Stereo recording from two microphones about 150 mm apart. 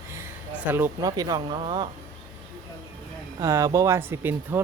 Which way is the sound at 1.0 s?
25° right (ahead or behind).